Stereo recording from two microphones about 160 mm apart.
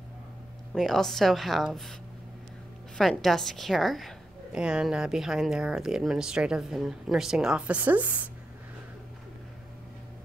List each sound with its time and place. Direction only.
0.7 s a woman's voice: centre (ahead or behind)
3.0 s a woman's voice: centre (ahead or behind)